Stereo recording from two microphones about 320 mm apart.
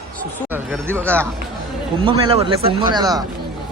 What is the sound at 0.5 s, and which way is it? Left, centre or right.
Speech, centre.